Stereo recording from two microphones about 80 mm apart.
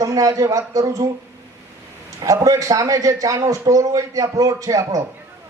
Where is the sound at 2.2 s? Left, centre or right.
Right.